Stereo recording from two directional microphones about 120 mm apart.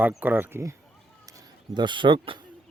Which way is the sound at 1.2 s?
35° right (ahead or behind).